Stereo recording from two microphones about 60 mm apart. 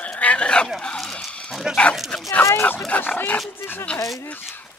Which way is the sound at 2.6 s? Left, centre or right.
Left.